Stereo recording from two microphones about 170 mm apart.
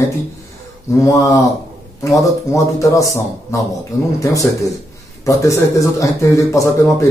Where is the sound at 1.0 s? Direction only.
20° left (ahead or behind).